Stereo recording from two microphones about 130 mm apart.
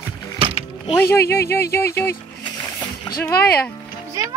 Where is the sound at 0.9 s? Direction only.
20° left (ahead or behind).